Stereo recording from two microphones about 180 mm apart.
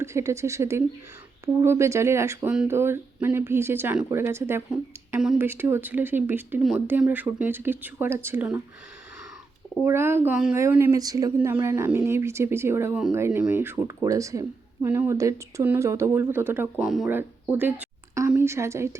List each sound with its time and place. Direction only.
0.0 s speech: 15° right (ahead or behind)
9.8 s speech: 15° right (ahead or behind)
17.5 s a sound: 10° right (ahead or behind)
18.3 s a woman's voice: 15° right (ahead or behind)